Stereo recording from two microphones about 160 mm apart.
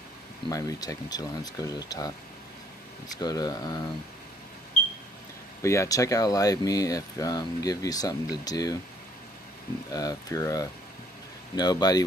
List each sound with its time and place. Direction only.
0.5 s speech: 20° left (ahead or behind)
3.2 s speech: 25° left (ahead or behind)
5.6 s speech: 20° left (ahead or behind)
9.9 s speech: 20° left (ahead or behind)